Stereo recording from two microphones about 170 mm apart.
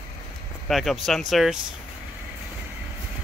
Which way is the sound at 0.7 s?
Centre (ahead or behind).